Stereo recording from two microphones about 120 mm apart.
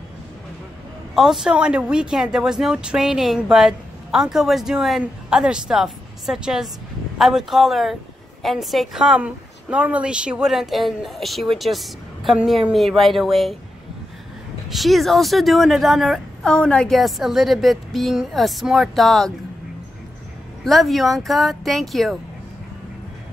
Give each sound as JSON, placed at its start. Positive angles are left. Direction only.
{"t": 1.1, "sound": "a woman's voice", "side_deg": -5}
{"t": 14.7, "sound": "speech", "side_deg": 0}
{"t": 20.6, "sound": "speech", "side_deg": 0}